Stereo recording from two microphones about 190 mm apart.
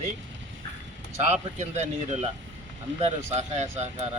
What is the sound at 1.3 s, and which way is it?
Speech, 35° right (ahead or behind).